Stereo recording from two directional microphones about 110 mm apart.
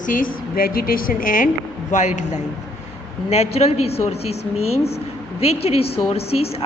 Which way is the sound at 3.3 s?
75° left (ahead or behind).